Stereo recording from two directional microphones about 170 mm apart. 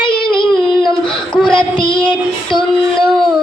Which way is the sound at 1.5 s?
30° left (ahead or behind).